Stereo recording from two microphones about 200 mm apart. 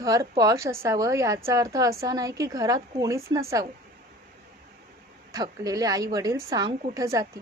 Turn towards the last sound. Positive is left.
turn(degrees=-15)  # may be behind; listen again after turning